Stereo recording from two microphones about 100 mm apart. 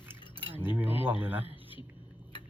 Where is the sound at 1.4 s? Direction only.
60° left (ahead or behind).